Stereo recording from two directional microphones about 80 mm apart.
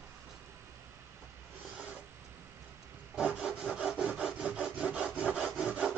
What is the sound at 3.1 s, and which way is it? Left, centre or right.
Rub, centre.